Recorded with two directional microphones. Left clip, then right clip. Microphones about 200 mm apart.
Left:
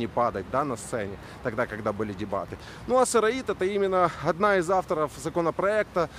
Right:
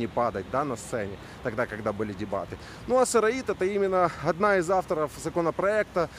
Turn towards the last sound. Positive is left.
turn(degrees=0)  # may be behind; listen again after turning